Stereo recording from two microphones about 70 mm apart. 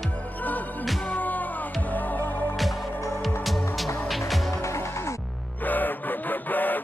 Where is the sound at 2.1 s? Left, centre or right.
Left.